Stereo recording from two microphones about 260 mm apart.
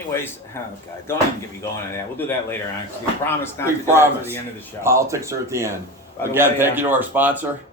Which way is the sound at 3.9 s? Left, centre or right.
Centre.